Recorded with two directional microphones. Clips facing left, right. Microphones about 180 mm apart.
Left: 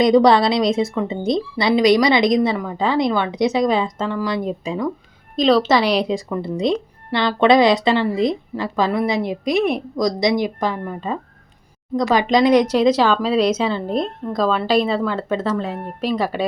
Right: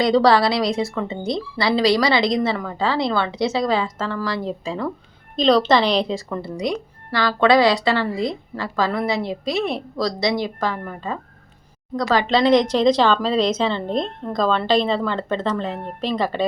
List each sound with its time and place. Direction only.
0.0 s a woman's voice: 20° left (ahead or behind)
5.4 s speech: 5° left (ahead or behind)
6.6 s speech: 25° left (ahead or behind)